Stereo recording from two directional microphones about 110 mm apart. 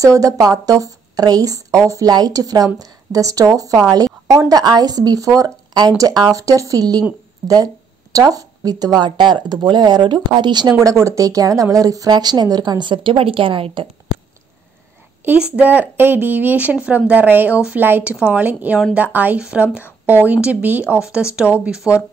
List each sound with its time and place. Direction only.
0.0 s speech: 30° right (ahead or behind); by 13.8 s 50° right (ahead or behind)
15.5 s speech: 15° right (ahead or behind)